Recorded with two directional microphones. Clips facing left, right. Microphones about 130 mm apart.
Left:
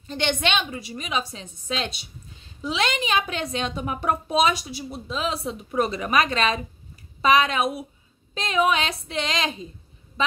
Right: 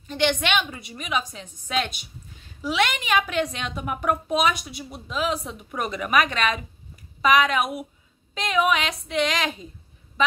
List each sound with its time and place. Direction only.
0.1 s a woman's voice: 30° left (ahead or behind)